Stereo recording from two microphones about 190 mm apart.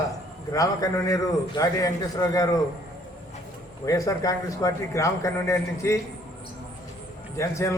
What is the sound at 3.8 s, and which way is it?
A man's voice, 15° left (ahead or behind).